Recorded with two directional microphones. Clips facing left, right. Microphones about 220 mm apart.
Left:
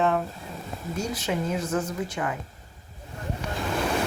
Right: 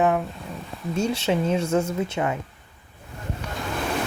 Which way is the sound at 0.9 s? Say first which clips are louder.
Right 6 dB; 25° right (ahead or behind).